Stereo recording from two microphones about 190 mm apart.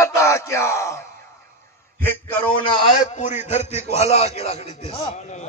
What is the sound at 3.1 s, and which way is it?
A man's voice, 35° left (ahead or behind).